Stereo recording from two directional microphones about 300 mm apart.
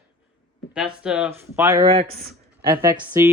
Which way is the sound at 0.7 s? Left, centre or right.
Centre.